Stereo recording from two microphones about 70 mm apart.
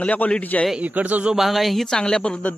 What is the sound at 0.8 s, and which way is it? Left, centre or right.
Speech, right.